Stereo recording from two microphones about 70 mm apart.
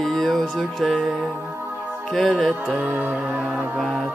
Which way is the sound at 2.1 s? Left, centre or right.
Centre.